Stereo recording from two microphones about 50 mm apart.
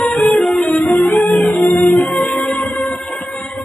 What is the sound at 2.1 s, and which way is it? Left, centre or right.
Music, centre.